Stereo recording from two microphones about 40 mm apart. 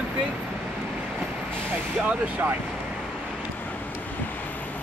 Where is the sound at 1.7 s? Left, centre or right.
Right.